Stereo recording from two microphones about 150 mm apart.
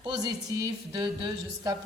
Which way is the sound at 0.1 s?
25° right (ahead or behind).